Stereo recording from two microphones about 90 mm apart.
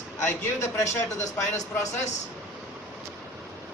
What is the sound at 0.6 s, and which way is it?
Speech, 35° left (ahead or behind).